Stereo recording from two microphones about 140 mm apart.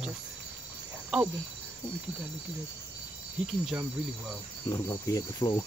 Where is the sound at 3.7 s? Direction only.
10° right (ahead or behind).